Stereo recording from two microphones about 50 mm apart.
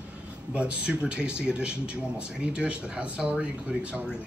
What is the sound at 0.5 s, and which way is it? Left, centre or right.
Speech, right.